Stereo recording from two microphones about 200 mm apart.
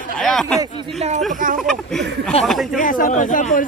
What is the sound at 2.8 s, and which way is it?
Speech, 40° left (ahead or behind).